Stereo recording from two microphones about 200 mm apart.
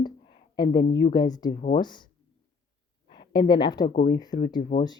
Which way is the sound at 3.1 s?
25° left (ahead or behind).